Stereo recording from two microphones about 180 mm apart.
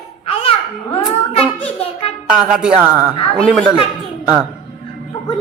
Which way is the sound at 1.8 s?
35° left (ahead or behind).